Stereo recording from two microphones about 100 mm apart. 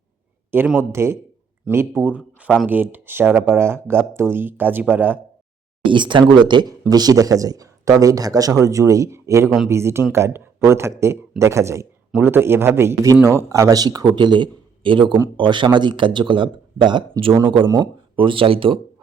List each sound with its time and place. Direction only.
0.8 s speech: 25° right (ahead or behind)
5.8 s a man's voice: 55° right (ahead or behind)
6.9 s a man's voice: 40° right (ahead or behind); by 18.8 s 65° right (ahead or behind)